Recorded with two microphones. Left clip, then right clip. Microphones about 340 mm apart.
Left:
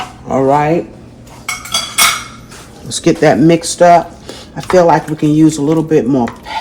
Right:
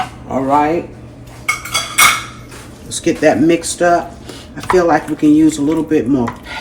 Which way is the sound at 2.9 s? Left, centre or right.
Left.